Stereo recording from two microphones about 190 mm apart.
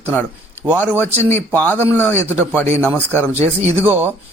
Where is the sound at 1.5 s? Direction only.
10° left (ahead or behind).